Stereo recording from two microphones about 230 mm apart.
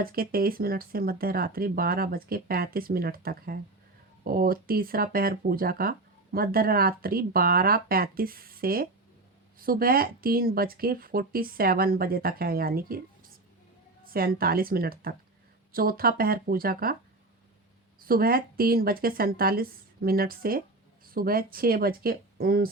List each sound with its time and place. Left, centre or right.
0.0 s speech: right
14.0 s speech: right
18.0 s speech: right